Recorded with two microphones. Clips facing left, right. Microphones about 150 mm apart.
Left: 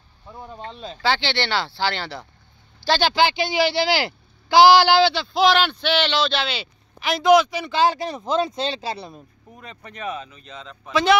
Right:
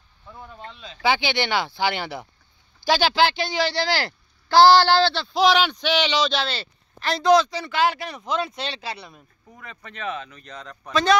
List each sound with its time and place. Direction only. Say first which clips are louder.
0.3 s speech: left 4 dB; 25° left (ahead or behind)
1.0 s speech: right 1 dB; 15° right (ahead or behind)
7.0 s speech: left 2 dB; 10° left (ahead or behind)
7.7 s speech: left 3 dB; 30° left (ahead or behind)
9.7 s speech: left 1 dB; 15° left (ahead or behind)